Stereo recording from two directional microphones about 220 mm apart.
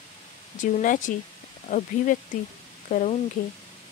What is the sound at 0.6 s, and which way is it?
Speech, 35° left (ahead or behind).